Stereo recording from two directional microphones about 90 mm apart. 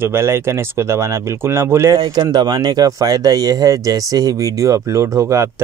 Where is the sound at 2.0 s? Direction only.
55° right (ahead or behind).